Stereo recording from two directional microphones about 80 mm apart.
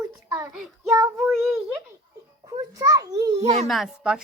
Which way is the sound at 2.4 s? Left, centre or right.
Right.